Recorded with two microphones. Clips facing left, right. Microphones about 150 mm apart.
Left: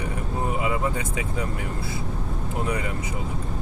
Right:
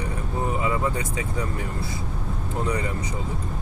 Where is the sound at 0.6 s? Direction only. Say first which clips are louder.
Right 1 dB; 20° left (ahead or behind).